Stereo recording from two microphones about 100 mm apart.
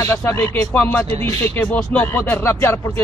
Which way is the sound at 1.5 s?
15° left (ahead or behind).